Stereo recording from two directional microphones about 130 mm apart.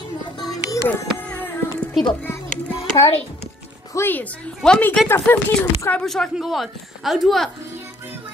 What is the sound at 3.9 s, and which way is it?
A woman's voice, 15° left (ahead or behind).